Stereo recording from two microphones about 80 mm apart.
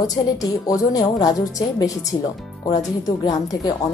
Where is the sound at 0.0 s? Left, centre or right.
Left.